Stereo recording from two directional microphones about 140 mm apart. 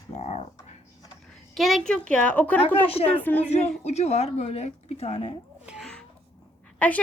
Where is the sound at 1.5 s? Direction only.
Centre (ahead or behind).